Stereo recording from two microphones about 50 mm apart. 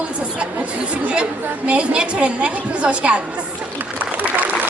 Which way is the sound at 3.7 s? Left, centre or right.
Right.